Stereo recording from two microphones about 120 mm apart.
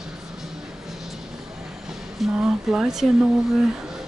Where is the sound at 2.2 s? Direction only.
5° right (ahead or behind).